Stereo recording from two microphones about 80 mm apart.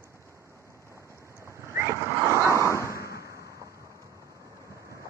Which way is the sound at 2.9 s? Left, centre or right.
Right.